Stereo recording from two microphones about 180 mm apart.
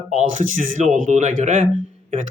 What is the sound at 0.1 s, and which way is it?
Speech, 45° right (ahead or behind).